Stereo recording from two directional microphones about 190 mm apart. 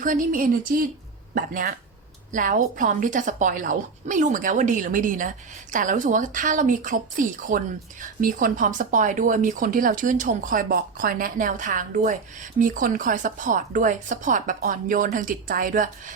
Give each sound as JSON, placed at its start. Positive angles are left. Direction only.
{"t": 0.0, "sound": "speech", "side_deg": -45}